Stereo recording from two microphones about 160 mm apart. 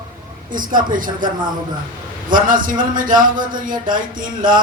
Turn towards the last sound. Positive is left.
turn(degrees=-55)  # may be behind; listen again after turning